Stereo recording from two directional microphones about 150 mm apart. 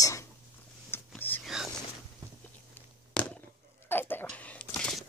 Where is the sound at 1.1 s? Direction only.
10° left (ahead or behind).